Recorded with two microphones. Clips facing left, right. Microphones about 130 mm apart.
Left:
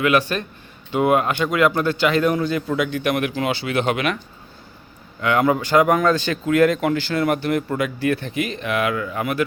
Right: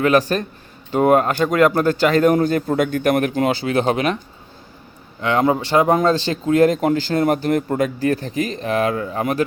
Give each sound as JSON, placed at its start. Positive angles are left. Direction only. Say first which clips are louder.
{"t": 0.0, "sound": "speech", "louder": "right 3 dB", "side_deg": -40}
{"t": 5.2, "sound": "speech", "louder": "right 1 dB", "side_deg": -30}